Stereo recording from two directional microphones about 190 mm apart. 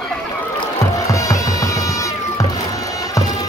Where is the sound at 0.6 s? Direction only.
15° left (ahead or behind).